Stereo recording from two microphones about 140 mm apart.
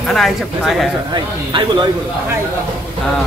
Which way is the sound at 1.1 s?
30° right (ahead or behind).